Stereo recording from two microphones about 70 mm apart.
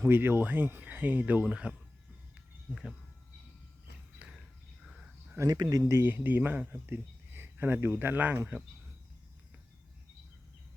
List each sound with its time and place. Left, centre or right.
0.0 s speech: right; by 2.9 s centre
4.2 s a sound: centre
5.4 s speech: right
5.9 s speech: right